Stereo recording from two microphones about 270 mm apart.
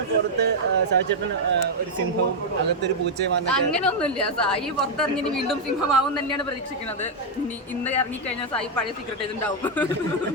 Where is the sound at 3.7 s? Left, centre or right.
Centre.